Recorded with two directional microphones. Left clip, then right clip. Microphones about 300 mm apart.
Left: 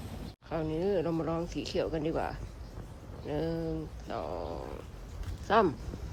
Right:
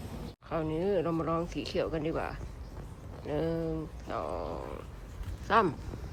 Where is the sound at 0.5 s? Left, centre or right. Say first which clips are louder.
Right 1 dB; centre.